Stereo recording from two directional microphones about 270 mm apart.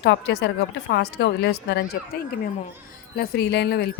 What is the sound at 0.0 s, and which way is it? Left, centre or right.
Speech, left.